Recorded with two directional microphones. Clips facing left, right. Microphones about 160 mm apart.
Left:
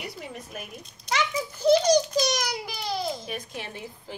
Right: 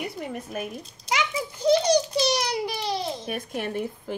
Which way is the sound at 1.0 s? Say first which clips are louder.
Even; 10° right (ahead or behind).